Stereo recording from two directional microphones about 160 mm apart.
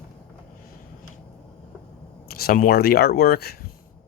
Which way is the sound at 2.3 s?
70° left (ahead or behind).